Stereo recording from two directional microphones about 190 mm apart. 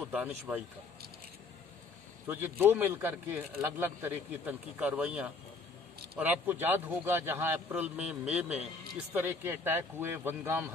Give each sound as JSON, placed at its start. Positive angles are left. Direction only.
{"t": 0.0, "sound": "speech", "side_deg": -10}
{"t": 2.2, "sound": "speech", "side_deg": -10}